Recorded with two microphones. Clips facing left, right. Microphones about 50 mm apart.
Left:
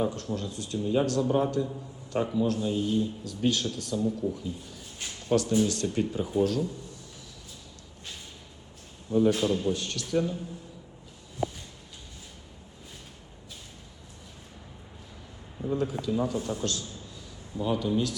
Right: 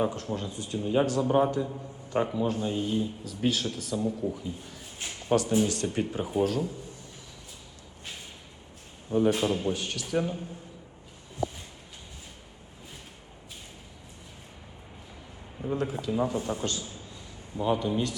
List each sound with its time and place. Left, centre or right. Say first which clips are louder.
0.0 s speech: even; right
2.8 s speech: left 2 dB; centre
9.0 s a man's voice: left 1 dB; right
15.5 s a sound: left 1 dB; centre
15.8 s speech: right 1 dB; centre